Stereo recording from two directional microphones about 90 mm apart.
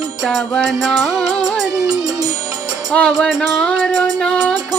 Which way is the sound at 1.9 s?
45° right (ahead or behind).